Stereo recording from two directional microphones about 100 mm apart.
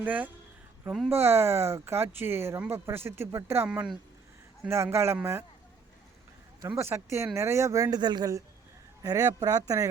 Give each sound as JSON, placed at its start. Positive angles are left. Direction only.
{"t": 0.0, "sound": "speech", "side_deg": -15}
{"t": 3.7, "sound": "speech", "side_deg": -5}
{"t": 4.7, "sound": "speech", "side_deg": -25}
{"t": 6.6, "sound": "speech", "side_deg": -35}
{"t": 6.8, "sound": "speech", "side_deg": -25}